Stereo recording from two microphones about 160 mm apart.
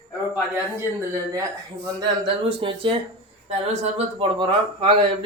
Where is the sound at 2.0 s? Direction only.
30° right (ahead or behind).